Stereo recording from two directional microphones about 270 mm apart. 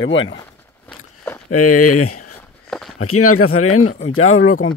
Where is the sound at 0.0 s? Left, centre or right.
Left.